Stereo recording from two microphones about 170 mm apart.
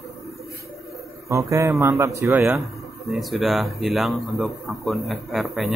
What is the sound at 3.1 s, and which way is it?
A man's voice, centre (ahead or behind).